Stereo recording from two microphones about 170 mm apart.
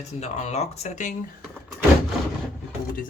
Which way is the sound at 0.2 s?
40° left (ahead or behind).